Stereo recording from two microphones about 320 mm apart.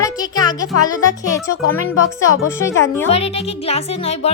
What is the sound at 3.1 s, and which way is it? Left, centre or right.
Speech, centre.